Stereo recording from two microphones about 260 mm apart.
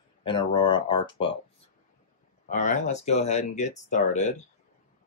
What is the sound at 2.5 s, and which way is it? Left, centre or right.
Speech, left.